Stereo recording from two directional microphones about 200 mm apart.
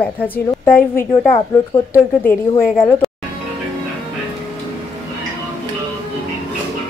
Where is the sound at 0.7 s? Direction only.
45° left (ahead or behind).